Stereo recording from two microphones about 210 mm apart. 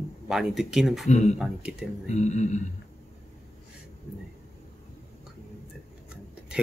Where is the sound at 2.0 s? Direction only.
35° left (ahead or behind).